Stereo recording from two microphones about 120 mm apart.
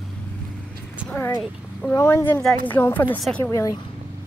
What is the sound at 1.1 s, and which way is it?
Horse, 20° left (ahead or behind).